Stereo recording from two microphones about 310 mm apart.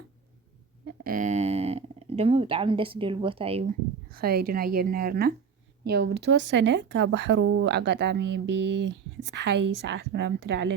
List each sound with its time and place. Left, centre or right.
0.9 s speech: right
4.1 s a woman's voice: right
8.9 s a woman's voice: right
9.8 s speech: right